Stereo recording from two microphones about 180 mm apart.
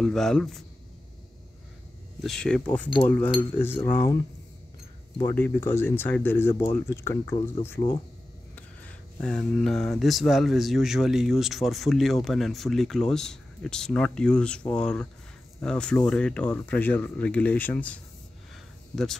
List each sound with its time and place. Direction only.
0.0 s speech: 5° left (ahead or behind)
2.2 s speech: 5° left (ahead or behind)
5.3 s speech: 10° left (ahead or behind)